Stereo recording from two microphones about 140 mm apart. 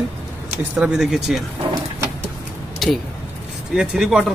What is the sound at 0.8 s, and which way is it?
Speech, 5° right (ahead or behind).